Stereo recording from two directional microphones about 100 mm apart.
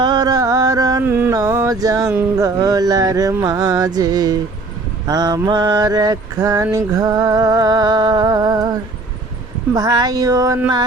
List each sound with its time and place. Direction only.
0.0 s carnatic music: 45° right (ahead or behind)
1.0 s carnatic music: 25° right (ahead or behind)
1.3 s music: 35° right (ahead or behind)
5.0 s mantra: 40° right (ahead or behind)
9.7 s music: 40° right (ahead or behind)